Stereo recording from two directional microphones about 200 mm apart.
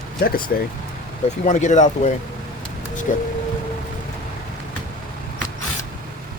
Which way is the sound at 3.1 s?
40° left (ahead or behind).